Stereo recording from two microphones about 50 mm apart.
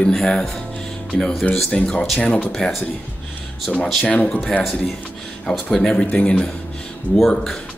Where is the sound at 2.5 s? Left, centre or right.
Centre.